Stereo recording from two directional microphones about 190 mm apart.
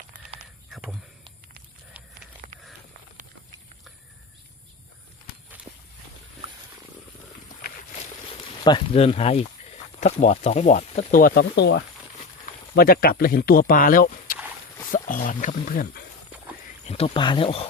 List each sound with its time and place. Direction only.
0.7 s speech: centre (ahead or behind)
2.0 s horse: 5° right (ahead or behind)
5.7 s walk: 30° right (ahead or behind)
8.6 s speech: 25° left (ahead or behind); by 16.0 s 50° left (ahead or behind)
16.8 s speech: 30° left (ahead or behind)